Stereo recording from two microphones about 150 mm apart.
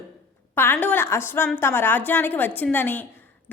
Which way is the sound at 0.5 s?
15° left (ahead or behind).